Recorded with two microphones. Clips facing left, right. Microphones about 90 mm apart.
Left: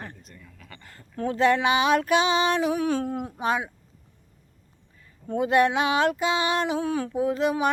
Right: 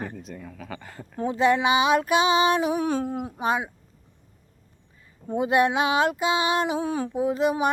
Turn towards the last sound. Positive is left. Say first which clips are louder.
# right 1 dB
turn(degrees=-10)  # may be behind; listen again after turning